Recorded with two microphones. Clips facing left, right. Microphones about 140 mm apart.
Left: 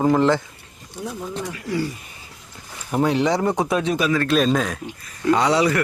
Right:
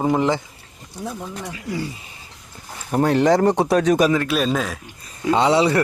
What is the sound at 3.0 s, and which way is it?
Speech, 50° right (ahead or behind).